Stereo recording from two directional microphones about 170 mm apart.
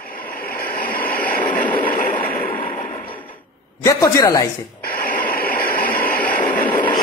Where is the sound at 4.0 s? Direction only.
20° left (ahead or behind).